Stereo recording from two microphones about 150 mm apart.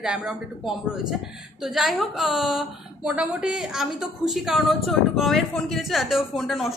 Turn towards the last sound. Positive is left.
turn(degrees=0)  # may be behind; listen again after turning